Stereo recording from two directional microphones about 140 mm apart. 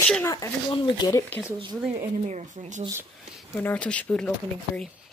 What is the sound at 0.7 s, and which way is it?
Speech, 35° left (ahead or behind).